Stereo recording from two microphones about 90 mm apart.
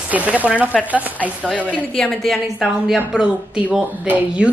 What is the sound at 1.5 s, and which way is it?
Speech, 15° left (ahead or behind).